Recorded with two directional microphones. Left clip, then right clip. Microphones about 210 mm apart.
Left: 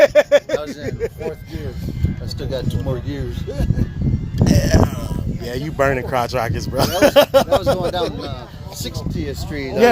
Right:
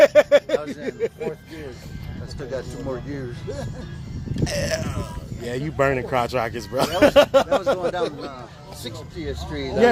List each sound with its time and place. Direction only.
0.0 s a sound: 5° right (ahead or behind)
0.9 s speech: 5° right (ahead or behind)
2.4 s speech: 40° left (ahead or behind)
4.4 s speech: centre (ahead or behind)
8.8 s speech: 50° left (ahead or behind)